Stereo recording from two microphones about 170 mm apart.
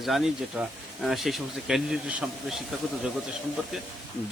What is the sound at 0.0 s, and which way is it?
Speech, centre (ahead or behind).